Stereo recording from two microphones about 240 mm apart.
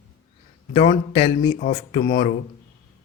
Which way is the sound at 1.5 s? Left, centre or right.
Left.